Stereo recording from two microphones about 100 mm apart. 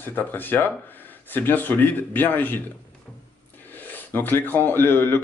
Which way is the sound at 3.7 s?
20° left (ahead or behind).